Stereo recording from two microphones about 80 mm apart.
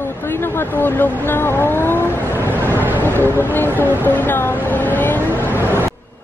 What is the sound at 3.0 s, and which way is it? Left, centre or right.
Speech, left.